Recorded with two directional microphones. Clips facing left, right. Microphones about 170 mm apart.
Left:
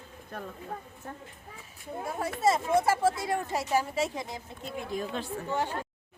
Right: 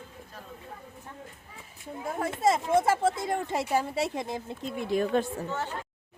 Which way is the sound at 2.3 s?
25° right (ahead or behind).